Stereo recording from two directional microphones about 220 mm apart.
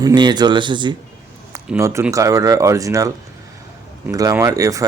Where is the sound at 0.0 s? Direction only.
20° right (ahead or behind).